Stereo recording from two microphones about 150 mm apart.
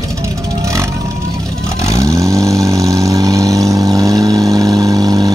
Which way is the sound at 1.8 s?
20° right (ahead or behind).